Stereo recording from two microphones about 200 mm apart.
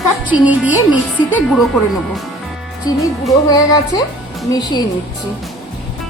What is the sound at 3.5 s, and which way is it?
Speech, 20° left (ahead or behind).